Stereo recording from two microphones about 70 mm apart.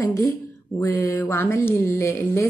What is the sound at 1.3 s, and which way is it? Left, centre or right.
Speech, left.